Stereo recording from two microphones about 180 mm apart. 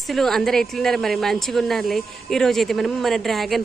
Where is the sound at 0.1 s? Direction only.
Centre (ahead or behind).